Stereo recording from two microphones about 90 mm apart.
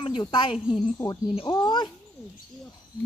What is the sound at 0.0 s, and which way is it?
Speech, 65° left (ahead or behind).